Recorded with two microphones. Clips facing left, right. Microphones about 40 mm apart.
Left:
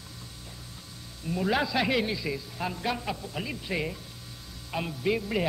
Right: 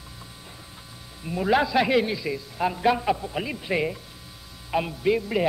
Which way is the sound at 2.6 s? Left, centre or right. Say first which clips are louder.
Right 10 dB; centre.